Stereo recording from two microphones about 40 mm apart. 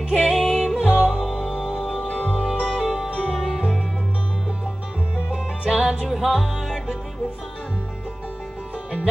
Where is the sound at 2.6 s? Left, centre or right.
Centre.